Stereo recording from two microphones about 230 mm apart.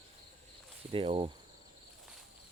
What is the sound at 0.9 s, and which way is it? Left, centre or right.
Speech, right.